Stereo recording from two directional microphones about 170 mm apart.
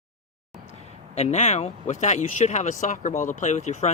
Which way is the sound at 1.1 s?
40° left (ahead or behind).